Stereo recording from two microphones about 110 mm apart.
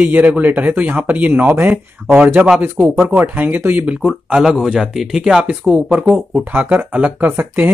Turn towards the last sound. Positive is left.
turn(degrees=-15)  # may be behind; listen again after turning